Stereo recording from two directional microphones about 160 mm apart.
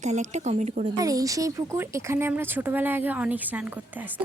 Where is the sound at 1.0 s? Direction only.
20° right (ahead or behind).